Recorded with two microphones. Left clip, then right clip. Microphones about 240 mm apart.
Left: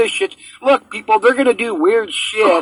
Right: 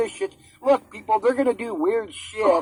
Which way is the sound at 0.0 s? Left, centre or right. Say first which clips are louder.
Left 10 dB; left.